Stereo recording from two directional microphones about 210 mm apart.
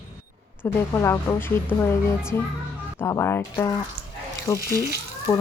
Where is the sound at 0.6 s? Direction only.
15° left (ahead or behind).